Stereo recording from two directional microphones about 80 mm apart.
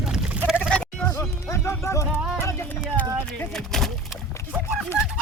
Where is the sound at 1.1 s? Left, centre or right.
Left.